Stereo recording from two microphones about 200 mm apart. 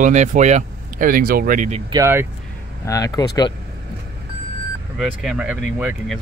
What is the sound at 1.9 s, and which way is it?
Speech, 15° right (ahead or behind).